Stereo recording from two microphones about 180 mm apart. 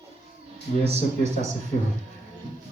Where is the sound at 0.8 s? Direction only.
40° right (ahead or behind).